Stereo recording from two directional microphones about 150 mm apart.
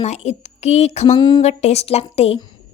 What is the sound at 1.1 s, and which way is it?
Speech, 30° left (ahead or behind).